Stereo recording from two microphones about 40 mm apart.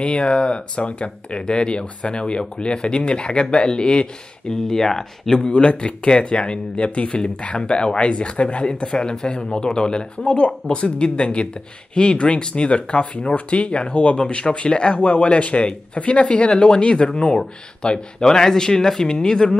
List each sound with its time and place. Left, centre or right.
0.0 s speech: left
4.6 s speech: centre
5.5 s speech: left